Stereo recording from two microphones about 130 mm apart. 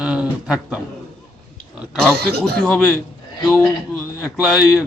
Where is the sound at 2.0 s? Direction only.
5° left (ahead or behind).